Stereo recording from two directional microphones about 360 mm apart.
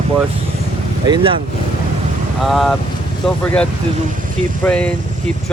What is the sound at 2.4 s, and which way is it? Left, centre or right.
Speech, centre.